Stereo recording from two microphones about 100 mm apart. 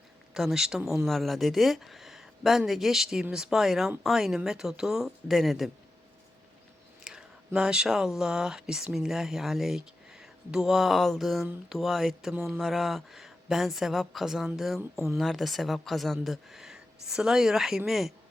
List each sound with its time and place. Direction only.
0.3 s speech: 5° right (ahead or behind)
7.0 s speech: 5° right (ahead or behind)
14.8 s speech: 25° right (ahead or behind)
15.2 s speech: centre (ahead or behind)